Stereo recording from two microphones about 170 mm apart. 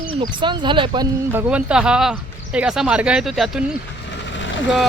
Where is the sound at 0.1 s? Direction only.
30° right (ahead or behind).